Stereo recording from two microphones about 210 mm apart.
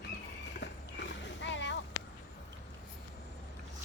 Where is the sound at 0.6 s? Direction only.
55° left (ahead or behind).